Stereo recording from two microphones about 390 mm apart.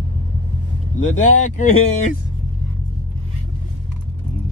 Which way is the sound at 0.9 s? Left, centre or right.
Centre.